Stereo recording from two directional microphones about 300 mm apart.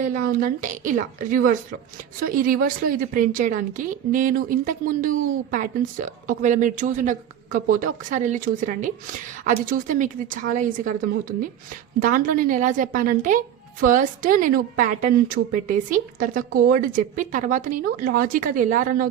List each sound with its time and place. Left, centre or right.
0.0 s a woman's voice: right